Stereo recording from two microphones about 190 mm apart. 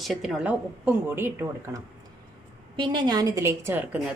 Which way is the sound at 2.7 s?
25° right (ahead or behind).